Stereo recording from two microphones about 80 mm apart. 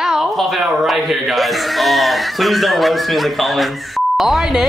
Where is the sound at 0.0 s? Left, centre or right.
Centre.